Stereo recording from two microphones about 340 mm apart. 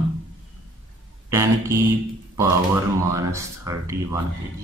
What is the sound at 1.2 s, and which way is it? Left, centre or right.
Speech, centre.